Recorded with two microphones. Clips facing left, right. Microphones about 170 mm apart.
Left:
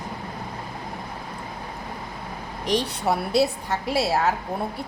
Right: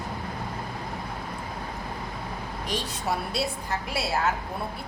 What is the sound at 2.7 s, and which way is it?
Speech, 65° left (ahead or behind).